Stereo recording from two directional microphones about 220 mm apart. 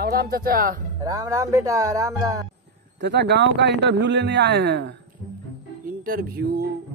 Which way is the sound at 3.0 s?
50° right (ahead or behind).